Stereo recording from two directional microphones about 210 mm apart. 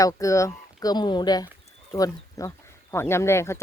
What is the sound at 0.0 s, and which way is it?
Speech, 15° left (ahead or behind).